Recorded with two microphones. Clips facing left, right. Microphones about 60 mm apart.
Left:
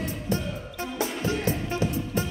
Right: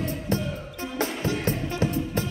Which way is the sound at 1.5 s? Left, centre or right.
Right.